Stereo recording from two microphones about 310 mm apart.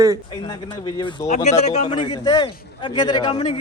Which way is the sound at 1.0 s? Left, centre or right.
Centre.